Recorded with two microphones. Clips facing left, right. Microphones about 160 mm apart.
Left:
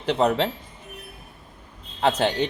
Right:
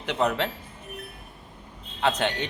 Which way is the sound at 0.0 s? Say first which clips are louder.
Left 4 dB; 35° left (ahead or behind).